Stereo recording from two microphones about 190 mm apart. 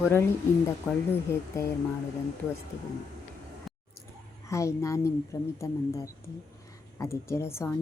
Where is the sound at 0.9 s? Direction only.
Centre (ahead or behind).